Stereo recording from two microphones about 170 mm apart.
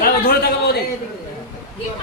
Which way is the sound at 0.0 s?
65° left (ahead or behind).